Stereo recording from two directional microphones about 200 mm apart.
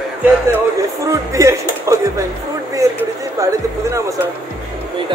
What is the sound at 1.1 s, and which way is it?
A man's voice, 15° right (ahead or behind).